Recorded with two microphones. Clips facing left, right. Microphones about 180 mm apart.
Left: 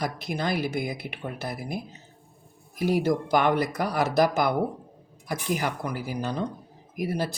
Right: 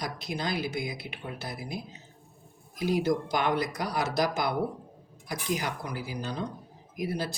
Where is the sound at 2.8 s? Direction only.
55° left (ahead or behind).